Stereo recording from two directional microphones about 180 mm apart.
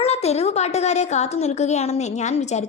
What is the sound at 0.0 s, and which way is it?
A woman's voice, 35° left (ahead or behind).